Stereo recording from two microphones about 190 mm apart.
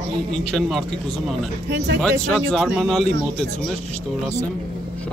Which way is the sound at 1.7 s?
65° right (ahead or behind).